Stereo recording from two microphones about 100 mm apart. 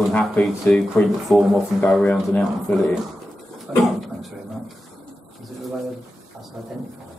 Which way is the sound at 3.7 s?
5° right (ahead or behind).